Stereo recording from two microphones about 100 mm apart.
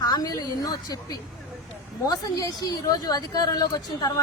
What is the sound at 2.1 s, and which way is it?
A woman's voice, 40° left (ahead or behind).